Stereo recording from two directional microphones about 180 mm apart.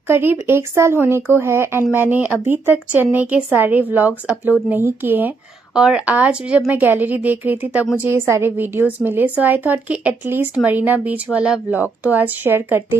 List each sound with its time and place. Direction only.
0.1 s a woman's voice: 10° right (ahead or behind)